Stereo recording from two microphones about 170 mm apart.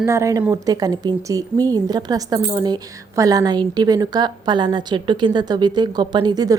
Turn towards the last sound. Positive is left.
turn(degrees=-25)  # may be behind; listen again after turning